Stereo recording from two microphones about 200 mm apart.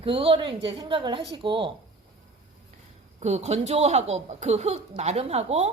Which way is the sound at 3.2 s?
35° right (ahead or behind).